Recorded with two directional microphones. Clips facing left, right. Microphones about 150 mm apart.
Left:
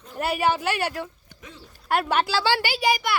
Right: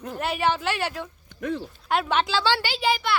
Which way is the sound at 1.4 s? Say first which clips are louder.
Right 17 dB; 60° right (ahead or behind).